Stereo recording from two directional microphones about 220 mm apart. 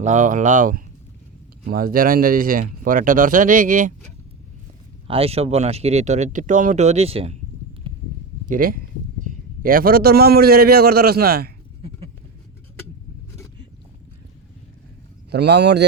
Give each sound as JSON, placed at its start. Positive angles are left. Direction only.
{"t": 0.0, "sound": "speech", "side_deg": -35}
{"t": 5.0, "sound": "speech", "side_deg": -25}
{"t": 7.9, "sound": "a sound", "side_deg": -25}
{"t": 8.4, "sound": "a man's voice", "side_deg": -40}
{"t": 11.8, "sound": "a sound", "side_deg": -25}
{"t": 15.3, "sound": "a man's voice", "side_deg": -50}